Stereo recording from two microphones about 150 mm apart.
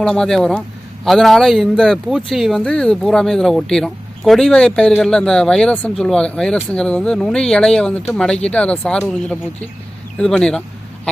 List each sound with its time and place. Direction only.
0.0 s a man's voice: 5° left (ahead or behind)